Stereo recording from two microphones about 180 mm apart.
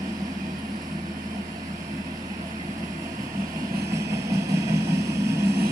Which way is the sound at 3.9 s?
15° right (ahead or behind).